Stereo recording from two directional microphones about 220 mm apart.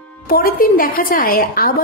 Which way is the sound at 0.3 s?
40° left (ahead or behind).